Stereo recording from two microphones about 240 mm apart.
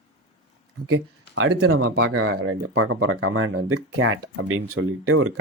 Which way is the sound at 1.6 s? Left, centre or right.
Right.